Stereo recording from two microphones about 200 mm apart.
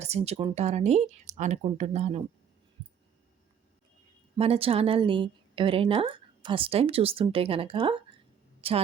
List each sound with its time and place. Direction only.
0.0 s speech: 30° right (ahead or behind)
4.4 s a woman's voice: 30° right (ahead or behind)